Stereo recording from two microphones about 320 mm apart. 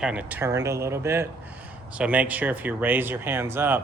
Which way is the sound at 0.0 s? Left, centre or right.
Centre.